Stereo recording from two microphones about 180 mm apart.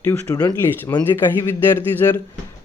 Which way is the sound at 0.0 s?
20° left (ahead or behind).